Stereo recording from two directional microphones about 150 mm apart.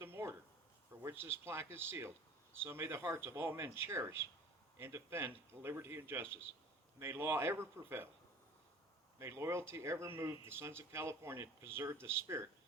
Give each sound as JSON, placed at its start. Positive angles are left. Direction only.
{"t": 0.0, "sound": "a sound", "side_deg": -15}
{"t": 1.0, "sound": "speech", "side_deg": -15}
{"t": 9.1, "sound": "speech", "side_deg": -20}